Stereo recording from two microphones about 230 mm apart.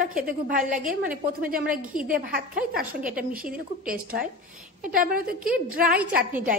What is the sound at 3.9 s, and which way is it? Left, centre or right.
A woman's voice, right.